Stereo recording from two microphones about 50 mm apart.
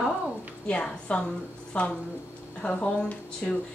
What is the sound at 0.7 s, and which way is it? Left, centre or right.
A woman's voice, left.